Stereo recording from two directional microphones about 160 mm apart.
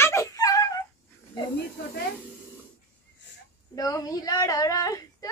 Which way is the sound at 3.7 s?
25° left (ahead or behind).